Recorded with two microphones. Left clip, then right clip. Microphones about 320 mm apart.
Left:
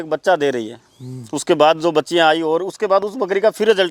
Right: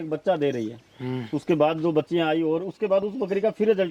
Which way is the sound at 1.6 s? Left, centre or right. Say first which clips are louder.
Left 9 dB; centre.